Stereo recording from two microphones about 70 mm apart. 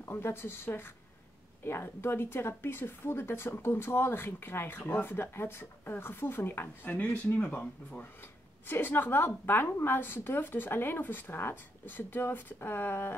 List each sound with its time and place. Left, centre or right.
0.0 s speech: left